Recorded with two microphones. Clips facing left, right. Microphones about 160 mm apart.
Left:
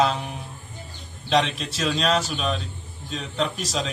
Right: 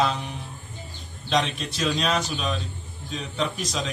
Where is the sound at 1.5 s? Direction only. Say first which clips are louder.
Even; centre (ahead or behind).